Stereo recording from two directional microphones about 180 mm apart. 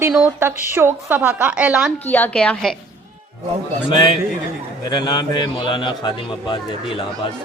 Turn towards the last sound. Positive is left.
turn(degrees=30)  # may be behind; listen again after turning